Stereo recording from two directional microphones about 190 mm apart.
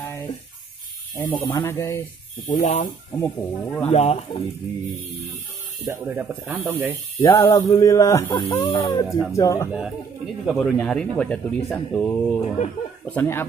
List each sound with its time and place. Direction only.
1.1 s speech: 25° left (ahead or behind)
1.5 s music: 15° left (ahead or behind)
2.4 s speech: 45° left (ahead or behind)
3.2 s music: 10° left (ahead or behind)
3.9 s speech: 35° left (ahead or behind)
5.9 s speech: 10° right (ahead or behind)
7.2 s music: 15° left (ahead or behind)
9.7 s a man's voice: 5° right (ahead or behind)
13.0 s music: 10° left (ahead or behind)